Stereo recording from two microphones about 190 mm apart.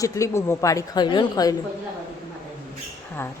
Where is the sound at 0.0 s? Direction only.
15° left (ahead or behind).